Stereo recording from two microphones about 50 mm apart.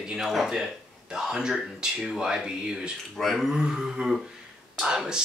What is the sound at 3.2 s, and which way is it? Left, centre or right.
Speech, centre.